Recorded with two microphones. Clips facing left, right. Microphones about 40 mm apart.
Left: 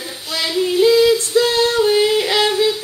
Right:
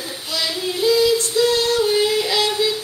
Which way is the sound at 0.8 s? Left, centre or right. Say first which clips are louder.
Left 3 dB; left.